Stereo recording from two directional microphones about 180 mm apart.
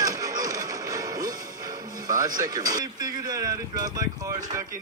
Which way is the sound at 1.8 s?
20° right (ahead or behind).